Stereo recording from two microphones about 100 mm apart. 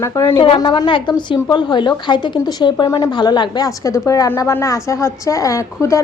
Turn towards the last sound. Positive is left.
turn(degrees=30)  # may be behind; listen again after turning